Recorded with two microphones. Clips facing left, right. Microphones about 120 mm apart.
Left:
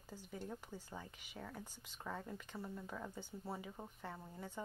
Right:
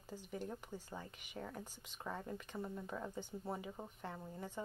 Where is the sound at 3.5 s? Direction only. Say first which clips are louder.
Right 2 dB; 5° right (ahead or behind).